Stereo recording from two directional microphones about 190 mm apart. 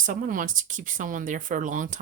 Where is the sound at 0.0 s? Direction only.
45° right (ahead or behind).